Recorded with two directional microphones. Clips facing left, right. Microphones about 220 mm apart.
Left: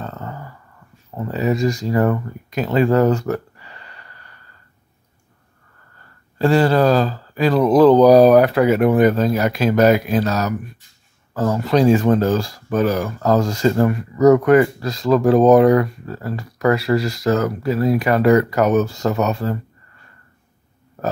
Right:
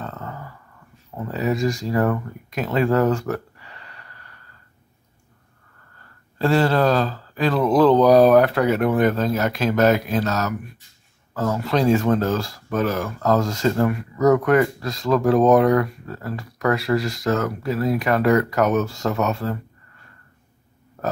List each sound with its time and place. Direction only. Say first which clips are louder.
0.0 s a sound: left 2 dB; 5° left (ahead or behind)
1.1 s speech: left 3 dB; 5° left (ahead or behind)
6.3 s speech: left 3 dB; centre (ahead or behind)
11.3 s speech: left 4 dB; centre (ahead or behind)